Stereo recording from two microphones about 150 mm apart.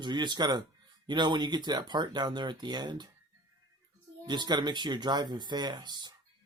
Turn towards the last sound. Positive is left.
turn(degrees=-30)  # may be behind; listen again after turning